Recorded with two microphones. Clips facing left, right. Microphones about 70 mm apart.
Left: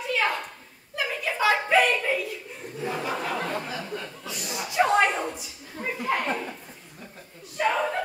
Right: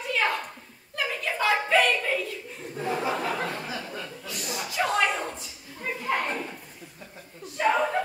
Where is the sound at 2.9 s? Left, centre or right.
Centre.